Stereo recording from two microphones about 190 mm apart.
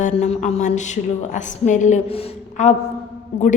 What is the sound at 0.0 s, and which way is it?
A woman's voice, 40° left (ahead or behind).